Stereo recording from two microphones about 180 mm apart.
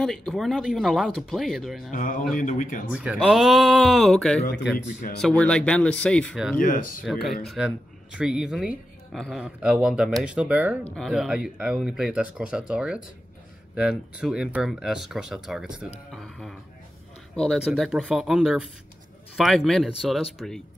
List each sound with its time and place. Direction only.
0.0 s speech: 5° left (ahead or behind)
1.9 s speech: 50° left (ahead or behind)
2.9 s speech: 5° right (ahead or behind)
6.6 s speech: 50° left (ahead or behind)
7.4 s speech: 5° right (ahead or behind)
16.1 s music: 5° left (ahead or behind)
17.4 s speech: centre (ahead or behind)